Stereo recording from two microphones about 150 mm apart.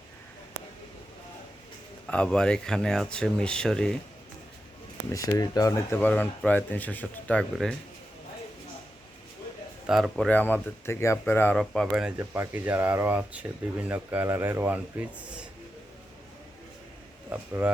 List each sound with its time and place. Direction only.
2.0 s speech: 5° left (ahead or behind)
5.1 s speech: 25° left (ahead or behind); by 7.8 s 5° left (ahead or behind)
9.8 s speech: centre (ahead or behind)
11.6 s speech: 5° left (ahead or behind)
12.1 s speech: 15° right (ahead or behind)
17.2 s speech: 15° right (ahead or behind)